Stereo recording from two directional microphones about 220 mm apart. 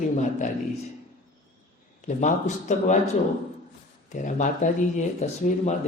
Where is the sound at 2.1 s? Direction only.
35° left (ahead or behind).